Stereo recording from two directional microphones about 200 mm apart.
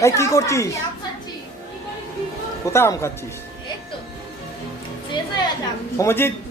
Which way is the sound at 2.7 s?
15° left (ahead or behind).